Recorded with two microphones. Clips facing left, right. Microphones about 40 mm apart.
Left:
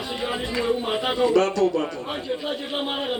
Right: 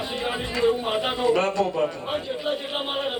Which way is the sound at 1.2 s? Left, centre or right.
Right.